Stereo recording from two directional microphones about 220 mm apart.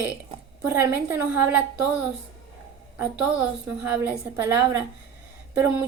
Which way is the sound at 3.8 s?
5° right (ahead or behind).